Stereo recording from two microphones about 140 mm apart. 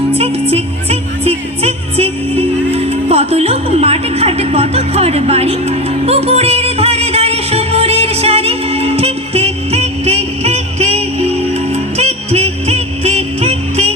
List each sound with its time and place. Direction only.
0.2 s music: 45° right (ahead or behind)